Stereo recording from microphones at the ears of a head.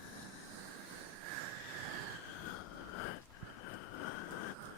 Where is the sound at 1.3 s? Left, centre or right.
Right.